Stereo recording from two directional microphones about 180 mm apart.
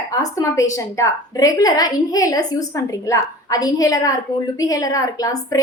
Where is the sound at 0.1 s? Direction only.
20° left (ahead or behind).